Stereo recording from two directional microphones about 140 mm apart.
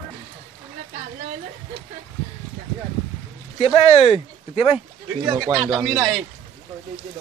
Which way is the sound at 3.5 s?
45° left (ahead or behind).